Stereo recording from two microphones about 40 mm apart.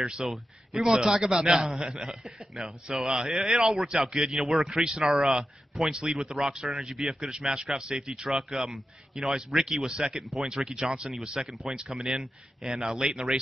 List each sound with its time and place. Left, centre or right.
0.0 s a man's voice: centre
3.1 s a man's voice: centre
4.6 s a man's voice: centre